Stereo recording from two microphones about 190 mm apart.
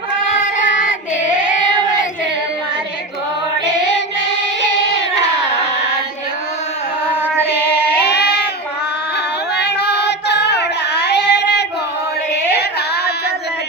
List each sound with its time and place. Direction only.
0.3 s child singing: 40° left (ahead or behind)
4.6 s singing: 65° left (ahead or behind)
8.0 s a sound: 60° left (ahead or behind)
9.6 s child singing: 60° left (ahead or behind)
12.3 s music: 60° left (ahead or behind)